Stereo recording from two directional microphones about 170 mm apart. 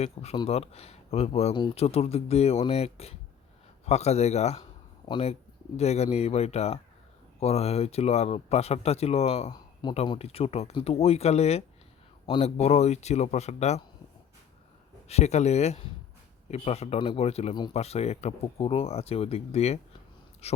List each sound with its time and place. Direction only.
0.0 s speech: 35° left (ahead or behind)
15.0 s speech: 40° left (ahead or behind)